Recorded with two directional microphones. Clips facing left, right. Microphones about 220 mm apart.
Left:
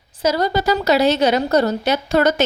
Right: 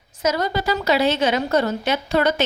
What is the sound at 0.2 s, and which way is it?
A woman's voice, 35° left (ahead or behind).